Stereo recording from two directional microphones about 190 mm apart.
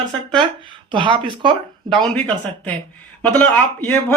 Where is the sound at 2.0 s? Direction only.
5° left (ahead or behind).